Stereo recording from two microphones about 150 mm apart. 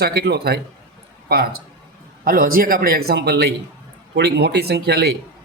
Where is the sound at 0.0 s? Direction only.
90° right.